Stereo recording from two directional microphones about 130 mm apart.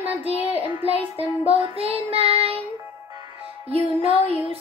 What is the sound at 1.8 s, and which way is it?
Child singing, 50° right (ahead or behind).